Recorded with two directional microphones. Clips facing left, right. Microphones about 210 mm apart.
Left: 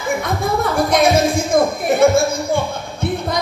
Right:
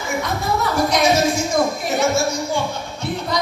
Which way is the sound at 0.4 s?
55° left (ahead or behind).